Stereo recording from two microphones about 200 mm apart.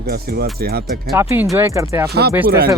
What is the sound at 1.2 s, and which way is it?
Speech, 10° right (ahead or behind).